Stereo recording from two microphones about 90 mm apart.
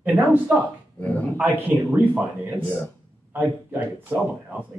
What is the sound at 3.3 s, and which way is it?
Speech, 20° right (ahead or behind).